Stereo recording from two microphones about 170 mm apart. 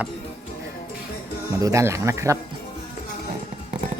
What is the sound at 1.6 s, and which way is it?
Speech, 15° right (ahead or behind).